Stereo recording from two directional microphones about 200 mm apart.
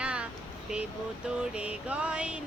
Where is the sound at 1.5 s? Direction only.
5° right (ahead or behind).